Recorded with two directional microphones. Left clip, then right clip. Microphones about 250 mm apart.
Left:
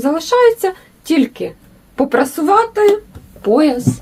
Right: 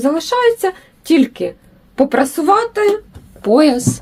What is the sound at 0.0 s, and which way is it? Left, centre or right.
Speech, right.